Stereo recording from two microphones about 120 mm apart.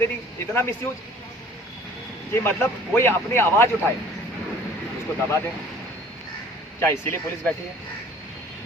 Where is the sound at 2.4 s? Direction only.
20° left (ahead or behind).